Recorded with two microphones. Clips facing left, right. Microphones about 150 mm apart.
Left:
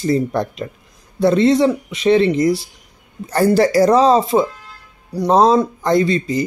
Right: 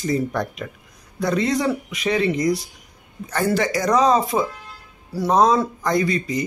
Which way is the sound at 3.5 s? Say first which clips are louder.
Left 7 dB; 35° left (ahead or behind).